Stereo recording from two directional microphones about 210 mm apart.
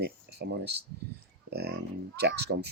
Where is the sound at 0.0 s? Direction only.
50° right (ahead or behind).